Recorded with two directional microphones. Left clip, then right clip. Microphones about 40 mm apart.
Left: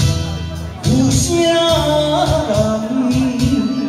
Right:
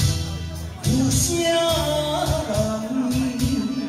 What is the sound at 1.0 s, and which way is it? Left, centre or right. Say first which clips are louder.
Music: left 7 dB; right.